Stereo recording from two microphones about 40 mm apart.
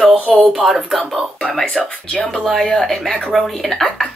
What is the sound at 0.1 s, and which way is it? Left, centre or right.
Speech, right.